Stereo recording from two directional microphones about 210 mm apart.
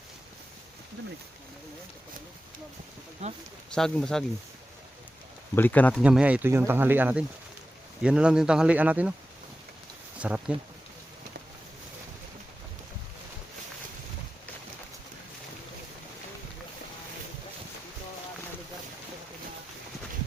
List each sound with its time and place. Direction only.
3.2 s speech: 30° right (ahead or behind)
3.7 s speech: 5° left (ahead or behind)
5.5 s speech: 10° left (ahead or behind)
6.0 s speech: 5° right (ahead or behind)
10.2 s speech: 5° right (ahead or behind)